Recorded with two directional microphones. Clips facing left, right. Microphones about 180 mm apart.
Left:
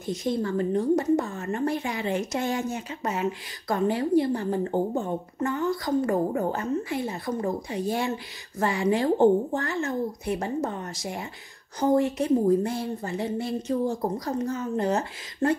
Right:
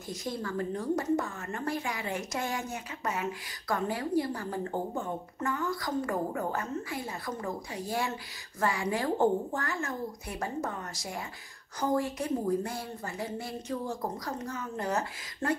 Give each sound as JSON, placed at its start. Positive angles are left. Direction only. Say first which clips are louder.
{"t": 0.0, "sound": "a woman's voice", "louder": "left 9 dB", "side_deg": 20}